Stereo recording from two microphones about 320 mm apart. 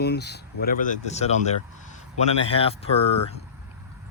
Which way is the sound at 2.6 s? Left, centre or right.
Centre.